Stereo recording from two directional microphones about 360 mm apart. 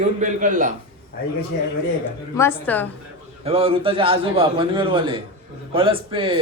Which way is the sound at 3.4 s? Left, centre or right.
Centre.